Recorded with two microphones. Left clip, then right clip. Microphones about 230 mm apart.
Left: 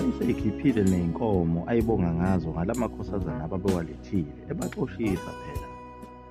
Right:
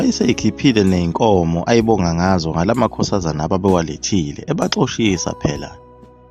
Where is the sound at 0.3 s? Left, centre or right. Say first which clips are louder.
Right 10 dB; right.